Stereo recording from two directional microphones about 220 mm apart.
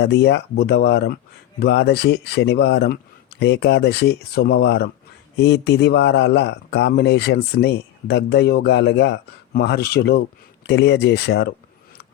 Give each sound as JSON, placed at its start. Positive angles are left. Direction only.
{"t": 0.0, "sound": "speech", "side_deg": 50}